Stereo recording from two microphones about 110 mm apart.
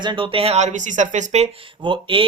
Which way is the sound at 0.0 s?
45° right (ahead or behind).